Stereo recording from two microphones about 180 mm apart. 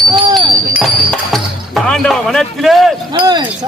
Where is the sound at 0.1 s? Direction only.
25° right (ahead or behind).